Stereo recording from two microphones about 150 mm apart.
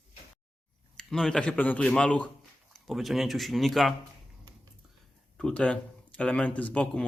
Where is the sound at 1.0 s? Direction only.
5° left (ahead or behind).